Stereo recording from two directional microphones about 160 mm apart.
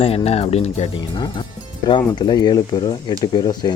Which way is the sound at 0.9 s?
30° left (ahead or behind).